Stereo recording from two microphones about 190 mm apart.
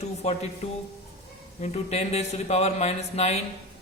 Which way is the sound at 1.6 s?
35° left (ahead or behind).